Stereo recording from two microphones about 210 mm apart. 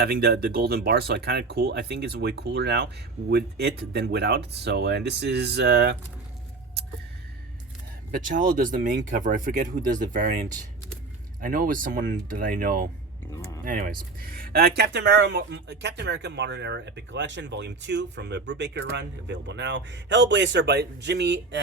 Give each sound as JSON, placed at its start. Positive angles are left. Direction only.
{"t": 0.0, "sound": "speech", "side_deg": -50}
{"t": 8.1, "sound": "speech", "side_deg": -40}
{"t": 11.3, "sound": "speech", "side_deg": -40}
{"t": 13.3, "sound": "speech", "side_deg": 15}
{"t": 13.7, "sound": "speech", "side_deg": -40}